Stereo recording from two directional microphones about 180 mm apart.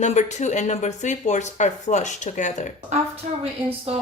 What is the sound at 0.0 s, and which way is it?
Speech, 40° left (ahead or behind).